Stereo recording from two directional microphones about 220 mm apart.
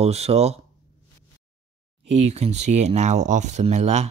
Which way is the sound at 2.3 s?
30° right (ahead or behind).